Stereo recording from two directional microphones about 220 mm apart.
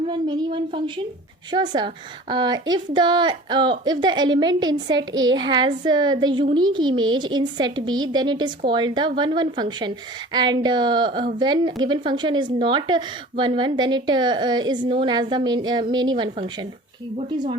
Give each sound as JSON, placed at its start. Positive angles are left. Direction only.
{"t": 0.1, "sound": "a woman's voice", "side_deg": -20}